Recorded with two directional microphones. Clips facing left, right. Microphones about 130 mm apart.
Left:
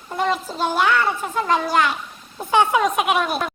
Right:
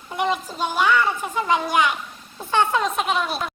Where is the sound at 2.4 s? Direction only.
10° left (ahead or behind).